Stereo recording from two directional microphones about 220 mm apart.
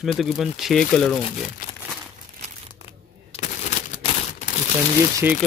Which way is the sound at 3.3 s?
30° left (ahead or behind).